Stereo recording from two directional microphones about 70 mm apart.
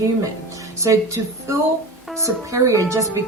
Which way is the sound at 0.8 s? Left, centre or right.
Right.